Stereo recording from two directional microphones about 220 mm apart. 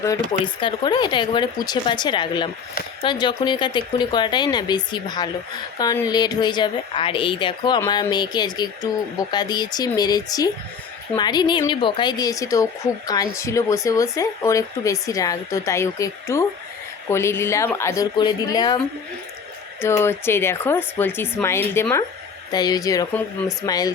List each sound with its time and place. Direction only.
0.3 s a woman's voice: 20° left (ahead or behind)
19.8 s speech: 10° left (ahead or behind)